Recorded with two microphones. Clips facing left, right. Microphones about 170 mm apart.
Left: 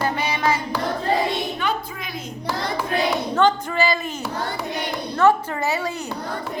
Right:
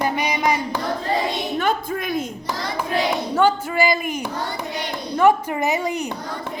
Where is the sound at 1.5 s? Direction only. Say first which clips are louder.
Right 4 dB; 50° right (ahead or behind).